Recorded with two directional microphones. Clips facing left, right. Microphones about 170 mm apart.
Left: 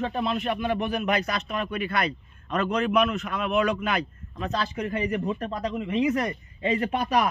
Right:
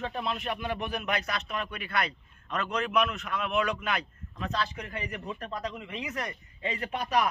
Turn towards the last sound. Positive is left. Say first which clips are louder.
# left 5 dB
turn(degrees=70)  # may be behind; listen again after turning